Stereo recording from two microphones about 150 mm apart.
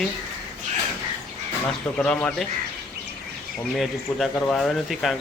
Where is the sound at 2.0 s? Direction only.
10° left (ahead or behind).